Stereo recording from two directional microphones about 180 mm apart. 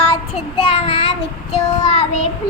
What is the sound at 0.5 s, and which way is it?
Child singing, 30° left (ahead or behind).